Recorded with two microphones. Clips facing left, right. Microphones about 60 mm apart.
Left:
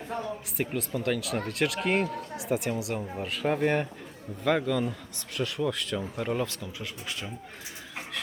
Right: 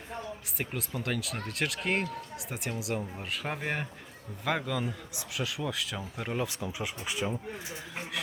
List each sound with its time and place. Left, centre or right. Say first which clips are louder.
0.5 s speech: left 5 dB; centre